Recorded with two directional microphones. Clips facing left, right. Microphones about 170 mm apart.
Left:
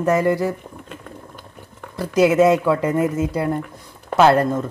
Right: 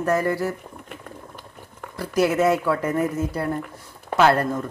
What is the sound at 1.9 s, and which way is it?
Speech, 20° left (ahead or behind).